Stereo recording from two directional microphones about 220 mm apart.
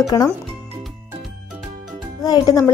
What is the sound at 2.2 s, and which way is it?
Speech, 15° left (ahead or behind).